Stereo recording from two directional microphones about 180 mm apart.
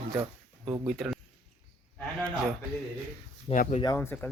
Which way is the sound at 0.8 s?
Centre (ahead or behind).